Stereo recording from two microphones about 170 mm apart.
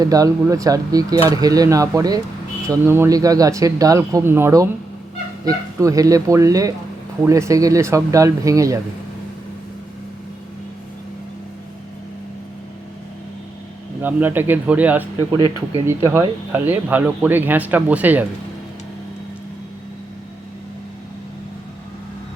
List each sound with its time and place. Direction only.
0.0 s speech: 20° right (ahead or behind)
14.0 s speech: 10° right (ahead or behind)